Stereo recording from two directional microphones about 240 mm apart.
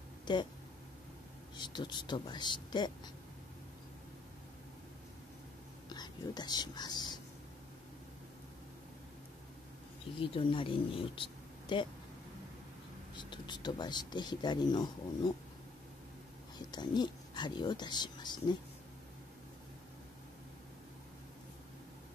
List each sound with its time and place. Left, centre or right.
0.2 s a sound: centre
1.6 s speech: centre
5.9 s speech: centre
10.1 s speech: left
13.1 s speech: centre
16.5 s speech: centre